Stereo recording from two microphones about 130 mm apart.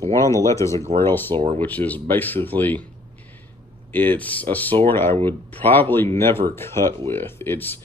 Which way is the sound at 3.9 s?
15° left (ahead or behind).